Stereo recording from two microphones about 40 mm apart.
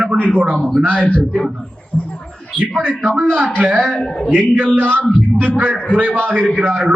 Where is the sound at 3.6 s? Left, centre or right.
Right.